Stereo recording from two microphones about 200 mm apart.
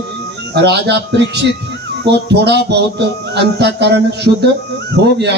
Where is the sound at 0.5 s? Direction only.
55° right (ahead or behind).